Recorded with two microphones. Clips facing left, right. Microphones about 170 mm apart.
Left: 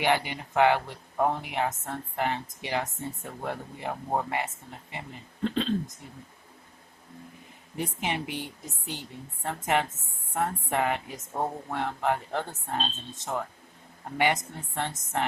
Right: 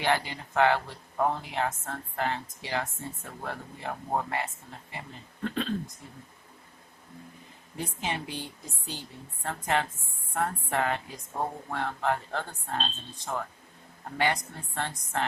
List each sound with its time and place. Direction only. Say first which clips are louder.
0.0 s speech: left 2 dB; 15° left (ahead or behind)
7.8 s speech: left 2 dB; 20° left (ahead or behind)